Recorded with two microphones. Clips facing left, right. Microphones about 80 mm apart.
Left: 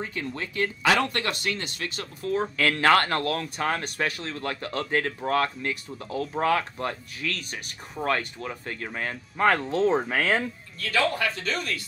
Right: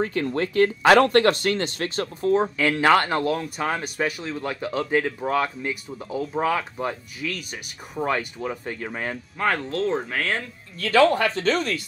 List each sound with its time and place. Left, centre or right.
0.0 s speech: right
2.3 s speech: centre
9.4 s speech: centre
10.8 s speech: right